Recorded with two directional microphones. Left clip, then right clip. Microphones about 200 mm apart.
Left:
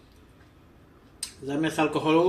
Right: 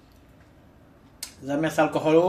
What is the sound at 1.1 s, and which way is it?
Speech, 40° right (ahead or behind).